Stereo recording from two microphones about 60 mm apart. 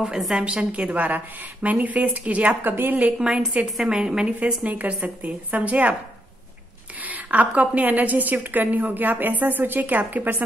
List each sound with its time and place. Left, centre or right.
0.0 s a woman's voice: centre
0.4 s a woman's voice: right
3.2 s a woman's voice: centre
4.4 s a woman's voice: right
7.0 s a woman's voice: right